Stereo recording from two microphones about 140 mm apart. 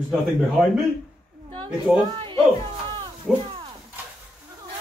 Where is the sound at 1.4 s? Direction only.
35° right (ahead or behind).